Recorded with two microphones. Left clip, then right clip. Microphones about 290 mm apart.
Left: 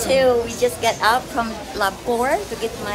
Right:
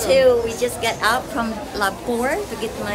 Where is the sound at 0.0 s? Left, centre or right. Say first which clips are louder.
Right 2 dB; centre.